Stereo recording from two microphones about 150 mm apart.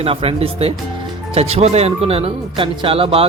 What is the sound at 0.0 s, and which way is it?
Speech, 40° right (ahead or behind).